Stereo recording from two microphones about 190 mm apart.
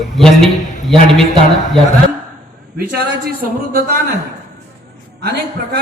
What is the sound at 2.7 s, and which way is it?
Speech, 55° right (ahead or behind).